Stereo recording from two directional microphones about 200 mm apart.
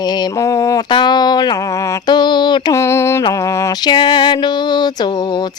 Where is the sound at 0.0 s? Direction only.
20° left (ahead or behind).